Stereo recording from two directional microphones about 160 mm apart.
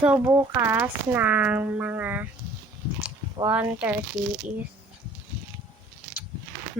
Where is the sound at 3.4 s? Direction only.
10° right (ahead or behind).